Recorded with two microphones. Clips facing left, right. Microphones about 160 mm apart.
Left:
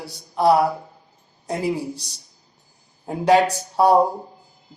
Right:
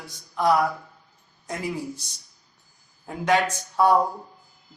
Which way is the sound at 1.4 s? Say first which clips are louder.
Left 6 dB; 30° left (ahead or behind).